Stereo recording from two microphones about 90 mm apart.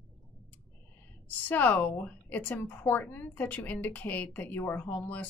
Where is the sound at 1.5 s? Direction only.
20° left (ahead or behind).